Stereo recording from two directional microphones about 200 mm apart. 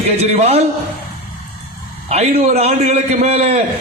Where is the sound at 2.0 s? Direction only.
30° right (ahead or behind).